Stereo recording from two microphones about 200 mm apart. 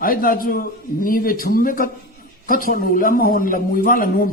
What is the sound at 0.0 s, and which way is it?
A man's voice, 45° left (ahead or behind).